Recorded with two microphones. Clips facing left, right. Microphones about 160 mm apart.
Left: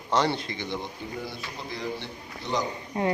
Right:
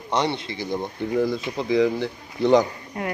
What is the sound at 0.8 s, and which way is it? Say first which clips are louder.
Speech: right 13 dB; 80° right.